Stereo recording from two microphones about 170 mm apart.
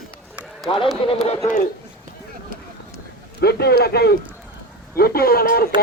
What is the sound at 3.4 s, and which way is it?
Speech, 70° left (ahead or behind).